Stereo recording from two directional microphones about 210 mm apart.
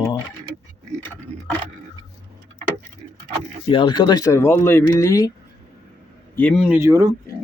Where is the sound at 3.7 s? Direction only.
20° left (ahead or behind).